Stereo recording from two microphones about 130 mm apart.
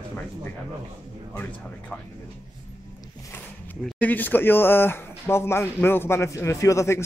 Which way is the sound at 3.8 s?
10° left (ahead or behind).